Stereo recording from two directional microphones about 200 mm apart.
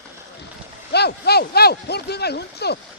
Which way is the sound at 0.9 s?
55° left (ahead or behind).